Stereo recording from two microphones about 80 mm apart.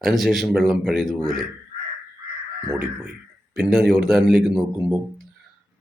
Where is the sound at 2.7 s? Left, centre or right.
Right.